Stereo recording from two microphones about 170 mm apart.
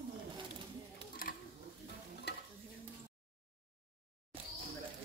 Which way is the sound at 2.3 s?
75° left (ahead or behind).